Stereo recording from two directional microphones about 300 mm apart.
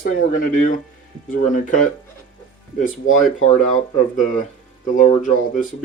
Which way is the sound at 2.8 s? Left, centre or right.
Left.